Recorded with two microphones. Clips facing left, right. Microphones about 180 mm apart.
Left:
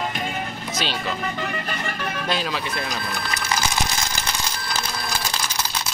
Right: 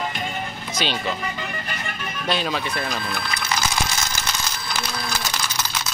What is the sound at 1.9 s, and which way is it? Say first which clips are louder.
Music: left 4 dB; 70° left (ahead or behind).